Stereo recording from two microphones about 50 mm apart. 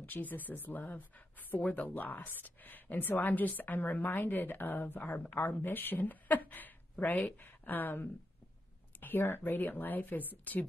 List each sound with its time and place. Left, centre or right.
0.0 s speech: left